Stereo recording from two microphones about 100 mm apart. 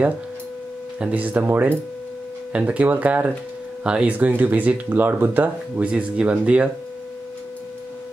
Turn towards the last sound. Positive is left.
turn(degrees=-10)  # may be behind; listen again after turning